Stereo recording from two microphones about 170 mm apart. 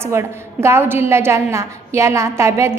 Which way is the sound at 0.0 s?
15° right (ahead or behind).